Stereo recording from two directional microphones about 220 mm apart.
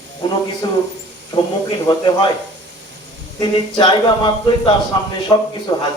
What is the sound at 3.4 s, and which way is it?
A man's voice, 20° left (ahead or behind).